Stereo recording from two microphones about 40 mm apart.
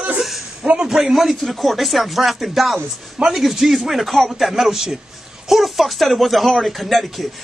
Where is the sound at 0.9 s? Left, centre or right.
Centre.